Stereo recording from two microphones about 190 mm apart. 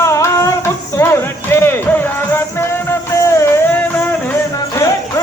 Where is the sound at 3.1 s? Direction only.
15° left (ahead or behind).